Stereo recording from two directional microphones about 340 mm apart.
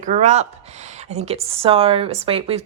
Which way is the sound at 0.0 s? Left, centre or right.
Right.